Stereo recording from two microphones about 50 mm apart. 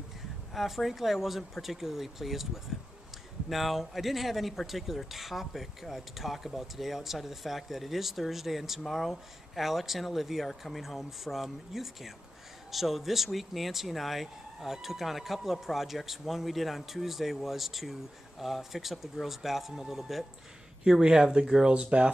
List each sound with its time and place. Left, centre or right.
0.6 s speech: centre